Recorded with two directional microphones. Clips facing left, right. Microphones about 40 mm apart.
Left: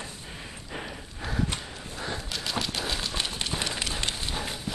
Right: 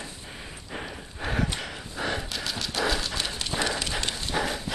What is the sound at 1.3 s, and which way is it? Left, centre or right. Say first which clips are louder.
Horse: right 1 dB; right.